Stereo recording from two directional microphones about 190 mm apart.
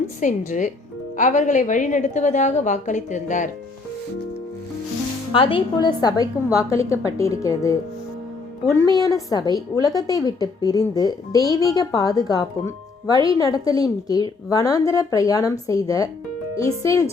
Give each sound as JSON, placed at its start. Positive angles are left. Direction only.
{"t": 0.2, "sound": "a woman's voice", "side_deg": 40}
{"t": 5.3, "sound": "a woman's voice", "side_deg": 30}
{"t": 9.0, "sound": "a woman's voice", "side_deg": 20}